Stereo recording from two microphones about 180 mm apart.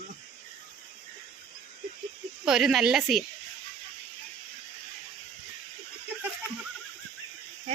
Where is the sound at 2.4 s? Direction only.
Centre (ahead or behind).